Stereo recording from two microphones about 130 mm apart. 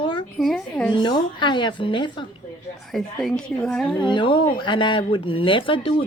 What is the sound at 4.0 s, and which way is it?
A woman's voice, 40° left (ahead or behind).